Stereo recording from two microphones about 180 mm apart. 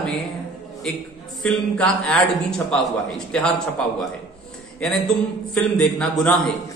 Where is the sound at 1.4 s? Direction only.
5° left (ahead or behind).